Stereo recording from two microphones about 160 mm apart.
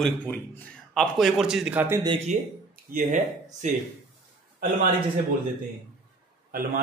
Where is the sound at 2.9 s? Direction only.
60° right (ahead or behind).